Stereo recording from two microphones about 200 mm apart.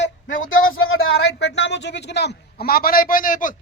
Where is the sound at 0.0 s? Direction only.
75° left (ahead or behind).